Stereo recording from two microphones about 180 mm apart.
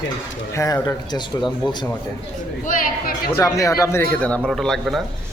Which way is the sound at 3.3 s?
15° left (ahead or behind).